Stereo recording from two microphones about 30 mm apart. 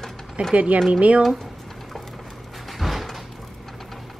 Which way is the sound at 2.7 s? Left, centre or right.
Centre.